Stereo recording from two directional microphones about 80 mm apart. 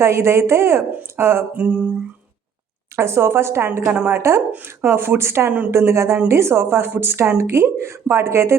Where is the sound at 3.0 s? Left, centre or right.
Right.